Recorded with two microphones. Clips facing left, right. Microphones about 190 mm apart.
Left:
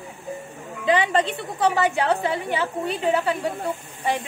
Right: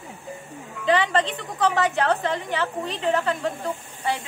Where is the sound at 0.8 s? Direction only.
15° left (ahead or behind).